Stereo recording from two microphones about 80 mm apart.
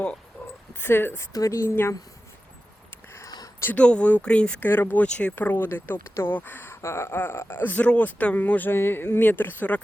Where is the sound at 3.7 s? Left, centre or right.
Centre.